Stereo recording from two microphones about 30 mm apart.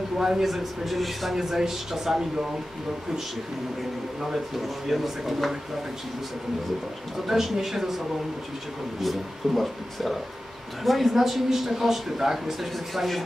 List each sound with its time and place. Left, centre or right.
0.2 s a man's voice: centre
1.3 s speech: centre
4.8 s speech: centre
7.2 s speech: centre
9.0 s a man's voice: centre
12.7 s a man's voice: centre